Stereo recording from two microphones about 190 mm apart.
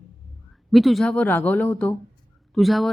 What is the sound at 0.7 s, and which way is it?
Speech, centre (ahead or behind).